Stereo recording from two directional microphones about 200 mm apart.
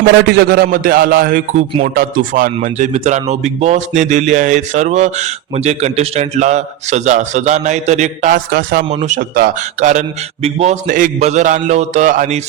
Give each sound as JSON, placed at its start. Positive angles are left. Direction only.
{"t": 0.3, "sound": "a man's voice", "side_deg": -55}
{"t": 8.9, "sound": "a man's voice", "side_deg": -35}